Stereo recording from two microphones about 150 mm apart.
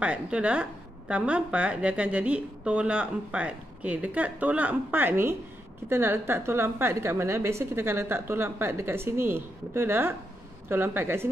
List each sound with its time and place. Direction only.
0.0 s a woman's voice: 10° right (ahead or behind)